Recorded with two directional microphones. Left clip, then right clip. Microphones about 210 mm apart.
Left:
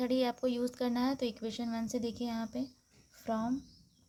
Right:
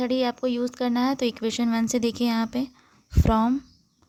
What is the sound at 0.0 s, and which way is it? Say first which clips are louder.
Speech: right 7 dB; 25° right (ahead or behind).